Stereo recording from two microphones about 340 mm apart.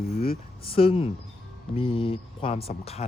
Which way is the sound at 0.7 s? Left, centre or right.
Centre.